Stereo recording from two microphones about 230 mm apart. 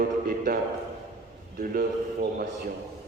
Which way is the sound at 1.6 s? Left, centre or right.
Right.